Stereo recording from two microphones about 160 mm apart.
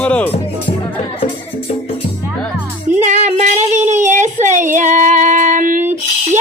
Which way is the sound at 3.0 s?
45° right (ahead or behind).